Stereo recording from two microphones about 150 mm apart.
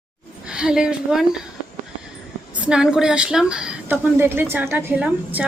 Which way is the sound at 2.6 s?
5° right (ahead or behind).